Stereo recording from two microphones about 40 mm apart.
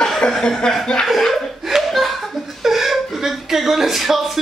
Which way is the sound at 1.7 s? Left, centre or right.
Centre.